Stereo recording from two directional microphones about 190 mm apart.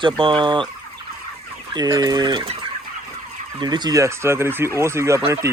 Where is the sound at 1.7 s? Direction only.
20° right (ahead or behind).